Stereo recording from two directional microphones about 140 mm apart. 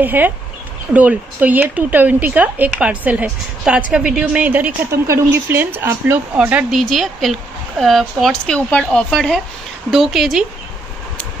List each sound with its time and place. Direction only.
0.0 s speech: 15° right (ahead or behind)
6.8 s speech: centre (ahead or behind)